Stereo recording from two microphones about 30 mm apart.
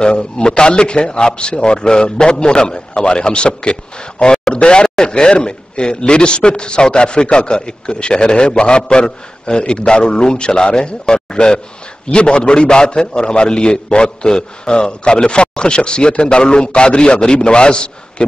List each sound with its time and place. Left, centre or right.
0.0 s a man's voice: left